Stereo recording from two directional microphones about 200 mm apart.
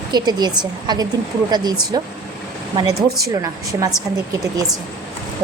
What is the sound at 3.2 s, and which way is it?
Speech, 15° right (ahead or behind).